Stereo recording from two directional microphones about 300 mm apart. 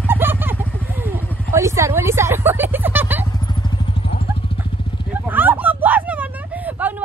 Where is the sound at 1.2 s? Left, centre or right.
Centre.